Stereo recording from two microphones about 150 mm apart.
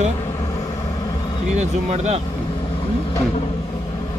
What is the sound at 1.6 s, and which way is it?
Speech, 45° right (ahead or behind).